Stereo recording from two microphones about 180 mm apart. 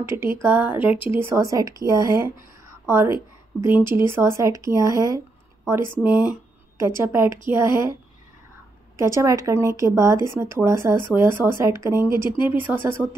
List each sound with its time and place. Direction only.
0.0 s speech: 15° right (ahead or behind)
8.9 s speech: 15° right (ahead or behind)